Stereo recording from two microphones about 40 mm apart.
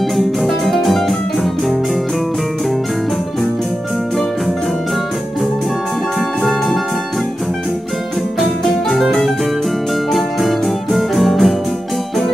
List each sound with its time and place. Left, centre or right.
0.1 s music: centre
10.1 s music: centre